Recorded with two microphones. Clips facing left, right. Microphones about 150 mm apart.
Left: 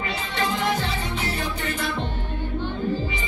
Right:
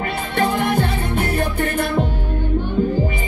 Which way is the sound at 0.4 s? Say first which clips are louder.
Right 6 dB; 55° right (ahead or behind).